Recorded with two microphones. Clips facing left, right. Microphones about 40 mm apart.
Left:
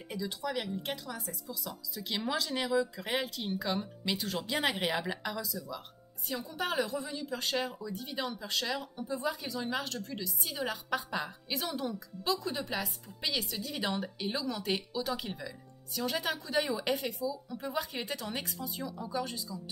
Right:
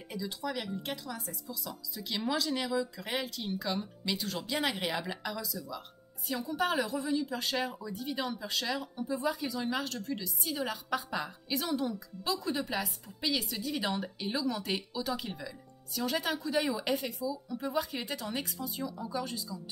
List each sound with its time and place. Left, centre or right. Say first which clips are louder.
0.5 s a woman's voice: left 1 dB; centre